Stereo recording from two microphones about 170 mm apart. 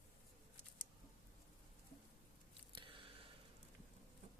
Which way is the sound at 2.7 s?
30° right (ahead or behind).